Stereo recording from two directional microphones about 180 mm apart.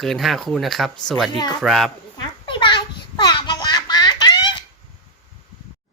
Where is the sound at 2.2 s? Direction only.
25° left (ahead or behind).